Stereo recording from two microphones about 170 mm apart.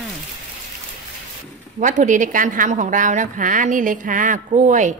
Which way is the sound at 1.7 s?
50° right (ahead or behind).